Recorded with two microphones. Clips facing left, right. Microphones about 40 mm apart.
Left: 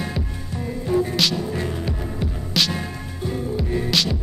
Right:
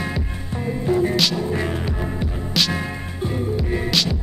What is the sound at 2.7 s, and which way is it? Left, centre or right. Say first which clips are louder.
Music: right 3 dB; right.